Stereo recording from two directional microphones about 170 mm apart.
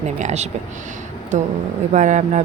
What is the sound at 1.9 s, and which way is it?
Speech, 45° right (ahead or behind).